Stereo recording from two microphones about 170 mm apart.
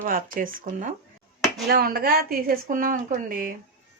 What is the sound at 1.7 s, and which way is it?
A woman's voice, 65° right (ahead or behind).